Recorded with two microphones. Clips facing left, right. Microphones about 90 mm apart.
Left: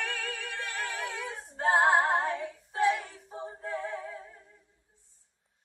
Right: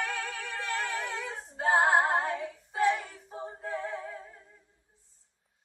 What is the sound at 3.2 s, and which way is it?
Synthetic singing, centre (ahead or behind).